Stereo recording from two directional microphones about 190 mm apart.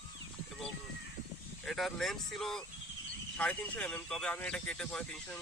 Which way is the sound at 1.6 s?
Centre (ahead or behind).